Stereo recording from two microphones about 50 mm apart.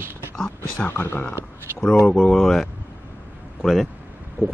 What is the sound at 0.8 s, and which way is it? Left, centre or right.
Speech, left.